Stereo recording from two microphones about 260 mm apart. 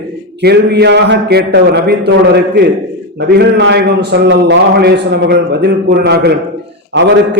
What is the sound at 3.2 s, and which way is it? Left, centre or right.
A man's voice, right.